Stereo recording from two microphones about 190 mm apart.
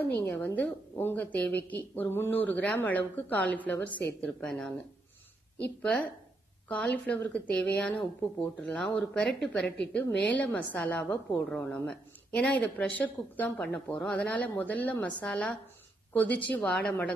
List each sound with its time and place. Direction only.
0.3 s a woman's voice: 10° left (ahead or behind)
5.8 s a woman's voice: 5° left (ahead or behind)